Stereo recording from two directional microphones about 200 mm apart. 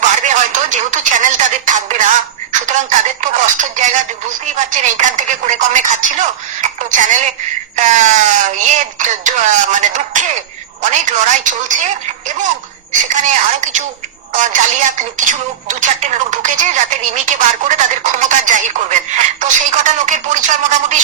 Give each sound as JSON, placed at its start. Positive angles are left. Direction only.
{"t": 0.2, "sound": "a sound", "side_deg": -40}
{"t": 4.6, "sound": "a woman's voice", "side_deg": -40}
{"t": 12.9, "sound": "a woman's voice", "side_deg": -40}
{"t": 14.3, "sound": "a woman's voice", "side_deg": -40}